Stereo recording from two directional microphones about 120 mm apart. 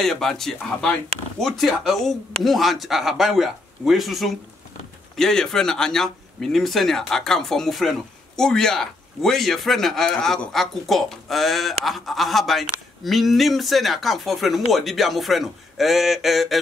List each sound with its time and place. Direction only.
0.0 s speech: 5° left (ahead or behind)